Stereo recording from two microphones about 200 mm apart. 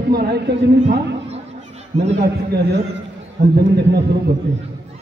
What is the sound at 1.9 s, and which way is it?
Speech, 35° right (ahead or behind).